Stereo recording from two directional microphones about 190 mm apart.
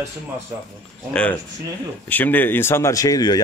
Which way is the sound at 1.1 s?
5° left (ahead or behind).